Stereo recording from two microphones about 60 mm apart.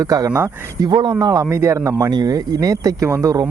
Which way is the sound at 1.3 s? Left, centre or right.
Right.